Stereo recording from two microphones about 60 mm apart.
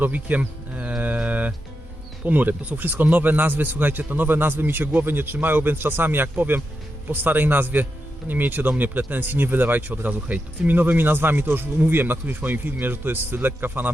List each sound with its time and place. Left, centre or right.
0.0 s livestock: right
2.2 s speech: right